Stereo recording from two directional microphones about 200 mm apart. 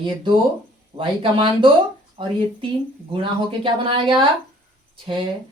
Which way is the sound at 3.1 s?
25° right (ahead or behind).